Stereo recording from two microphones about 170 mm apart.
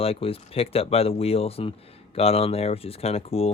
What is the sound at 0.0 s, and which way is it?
Speech, 35° left (ahead or behind).